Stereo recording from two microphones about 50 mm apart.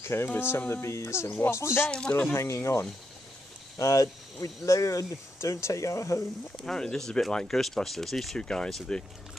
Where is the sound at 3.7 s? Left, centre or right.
Left.